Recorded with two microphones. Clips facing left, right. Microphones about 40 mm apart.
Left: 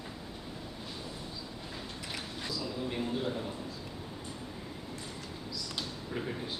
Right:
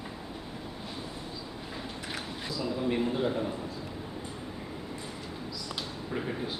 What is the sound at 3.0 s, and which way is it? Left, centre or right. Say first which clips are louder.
Speech: right 5 dB; centre.